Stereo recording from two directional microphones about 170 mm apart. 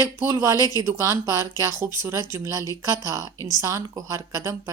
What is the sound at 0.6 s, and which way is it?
Speech, 20° left (ahead or behind).